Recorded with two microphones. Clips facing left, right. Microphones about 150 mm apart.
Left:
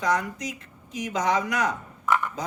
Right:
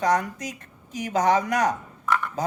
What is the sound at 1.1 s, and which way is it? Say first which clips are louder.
Speech: right 4 dB; 50° right (ahead or behind).